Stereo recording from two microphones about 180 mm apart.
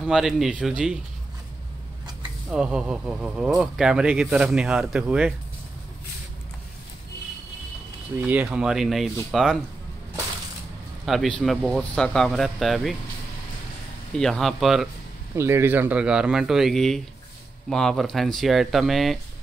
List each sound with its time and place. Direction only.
0.0 s speech: centre (ahead or behind)
2.5 s speech: 5° right (ahead or behind)
8.2 s speech: 10° right (ahead or behind)
11.1 s speech: centre (ahead or behind)
14.1 s speech: 5° left (ahead or behind)
15.3 s speech: 15° right (ahead or behind)